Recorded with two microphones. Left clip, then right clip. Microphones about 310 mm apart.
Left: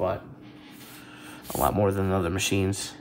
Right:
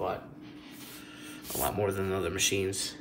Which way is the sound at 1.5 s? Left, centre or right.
Centre.